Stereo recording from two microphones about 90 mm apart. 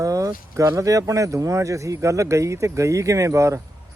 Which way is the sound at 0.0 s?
40° right (ahead or behind).